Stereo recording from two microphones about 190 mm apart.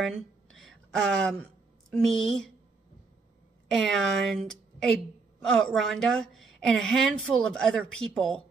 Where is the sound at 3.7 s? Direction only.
Centre (ahead or behind).